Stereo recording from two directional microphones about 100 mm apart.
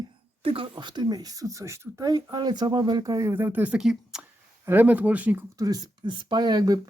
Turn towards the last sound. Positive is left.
turn(degrees=-40)  # may be behind; listen again after turning